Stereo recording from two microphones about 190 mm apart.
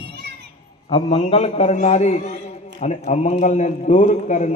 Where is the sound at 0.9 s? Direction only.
30° left (ahead or behind).